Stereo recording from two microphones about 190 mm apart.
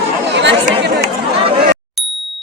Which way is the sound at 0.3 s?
65° right (ahead or behind).